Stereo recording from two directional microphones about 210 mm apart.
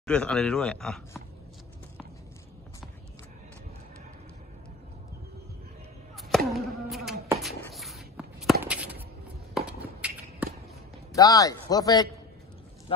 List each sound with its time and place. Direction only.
0.0 s speech: 5° left (ahead or behind)
6.1 s a sound: centre (ahead or behind)
11.1 s speech: 15° left (ahead or behind)